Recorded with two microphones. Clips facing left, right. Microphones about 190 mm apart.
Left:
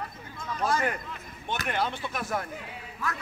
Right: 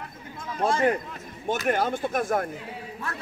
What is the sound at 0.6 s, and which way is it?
Speech, 30° right (ahead or behind).